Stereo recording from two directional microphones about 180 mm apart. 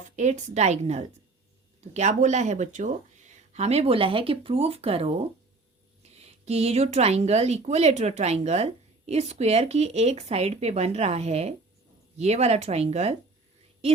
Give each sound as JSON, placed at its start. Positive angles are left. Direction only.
{"t": 0.2, "sound": "speech", "side_deg": -40}